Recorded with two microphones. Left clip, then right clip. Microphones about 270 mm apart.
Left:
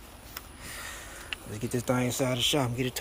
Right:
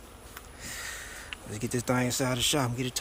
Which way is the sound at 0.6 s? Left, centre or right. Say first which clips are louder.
Right 3 dB; centre.